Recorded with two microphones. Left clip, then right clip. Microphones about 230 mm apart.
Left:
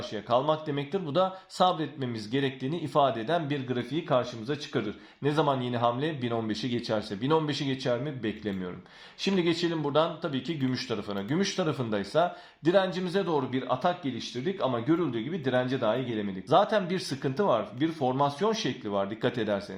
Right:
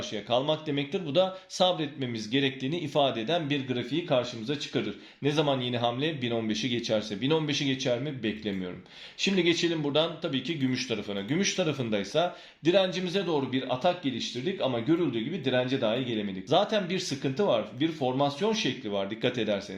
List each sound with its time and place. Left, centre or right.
0.3 s speech: centre